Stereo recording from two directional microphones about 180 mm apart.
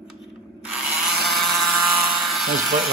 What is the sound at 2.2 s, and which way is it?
Electric toothbrush, centre (ahead or behind).